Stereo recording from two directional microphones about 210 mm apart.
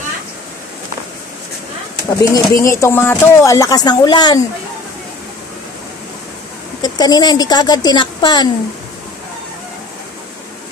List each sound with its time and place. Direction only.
2.0 s speech: 15° left (ahead or behind)
6.8 s a woman's voice: 20° left (ahead or behind)